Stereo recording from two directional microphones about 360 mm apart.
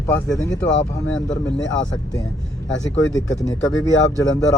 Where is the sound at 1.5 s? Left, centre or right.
Left.